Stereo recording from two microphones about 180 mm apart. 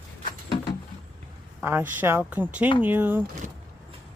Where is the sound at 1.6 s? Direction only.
10° right (ahead or behind).